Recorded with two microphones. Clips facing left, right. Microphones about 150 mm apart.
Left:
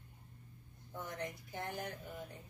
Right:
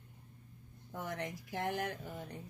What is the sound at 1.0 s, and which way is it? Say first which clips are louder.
Speech: right 3 dB; 90° right.